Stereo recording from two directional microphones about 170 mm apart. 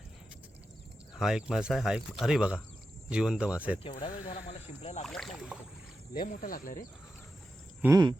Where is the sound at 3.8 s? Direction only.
30° left (ahead or behind).